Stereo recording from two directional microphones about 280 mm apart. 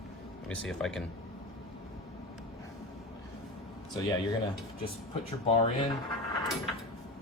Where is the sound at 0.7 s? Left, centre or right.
Centre.